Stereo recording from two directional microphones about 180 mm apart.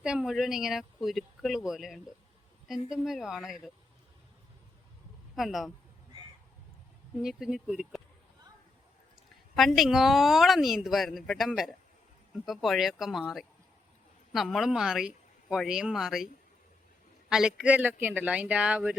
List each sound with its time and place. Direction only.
0.0 s a woman's voice: 5° right (ahead or behind)
5.4 s a woman's voice: centre (ahead or behind)
7.2 s a woman's voice: 5° right (ahead or behind)
9.6 s a woman's voice: centre (ahead or behind)